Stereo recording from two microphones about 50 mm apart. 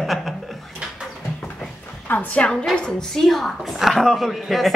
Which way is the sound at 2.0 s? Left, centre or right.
Left.